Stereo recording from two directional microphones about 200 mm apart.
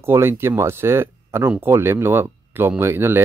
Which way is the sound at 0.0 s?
10° right (ahead or behind).